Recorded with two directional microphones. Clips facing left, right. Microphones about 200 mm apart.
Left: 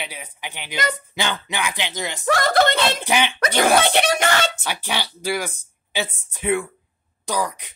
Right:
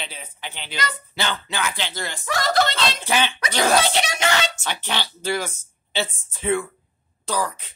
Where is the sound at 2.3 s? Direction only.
55° left (ahead or behind).